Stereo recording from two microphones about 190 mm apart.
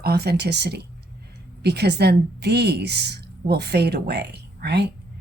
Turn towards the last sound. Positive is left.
turn(degrees=-60)  # may be behind; listen again after turning